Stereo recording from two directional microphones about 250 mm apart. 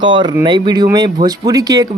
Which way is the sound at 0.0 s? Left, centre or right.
Centre.